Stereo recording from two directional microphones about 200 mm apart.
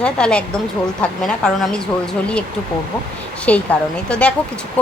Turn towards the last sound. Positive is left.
turn(degrees=5)  # may be behind; listen again after turning